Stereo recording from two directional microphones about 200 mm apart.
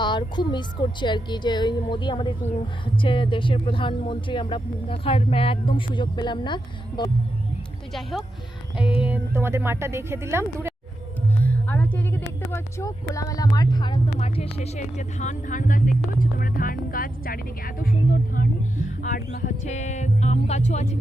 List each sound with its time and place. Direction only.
0.0 s speech: 20° left (ahead or behind)
9.0 s speech: 5° right (ahead or behind)
11.4 s a sound: 10° left (ahead or behind)
12.5 s speech: 15° left (ahead or behind); by 20.9 s 35° left (ahead or behind)